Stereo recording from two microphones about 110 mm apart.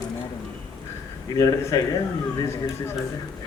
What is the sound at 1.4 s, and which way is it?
Speech, 30° left (ahead or behind).